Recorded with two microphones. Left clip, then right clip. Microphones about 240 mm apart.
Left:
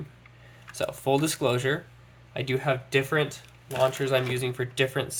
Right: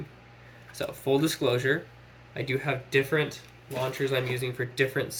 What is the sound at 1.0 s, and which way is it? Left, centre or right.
Speech, left.